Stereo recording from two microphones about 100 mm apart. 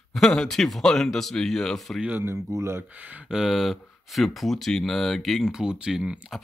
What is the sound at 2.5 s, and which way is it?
Speech, 25° right (ahead or behind).